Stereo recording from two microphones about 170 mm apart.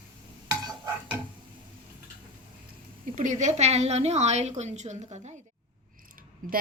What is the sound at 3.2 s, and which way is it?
A woman's voice, 45° right (ahead or behind).